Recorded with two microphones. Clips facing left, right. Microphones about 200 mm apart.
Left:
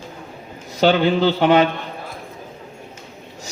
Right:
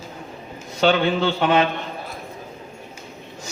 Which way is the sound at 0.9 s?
35° left (ahead or behind).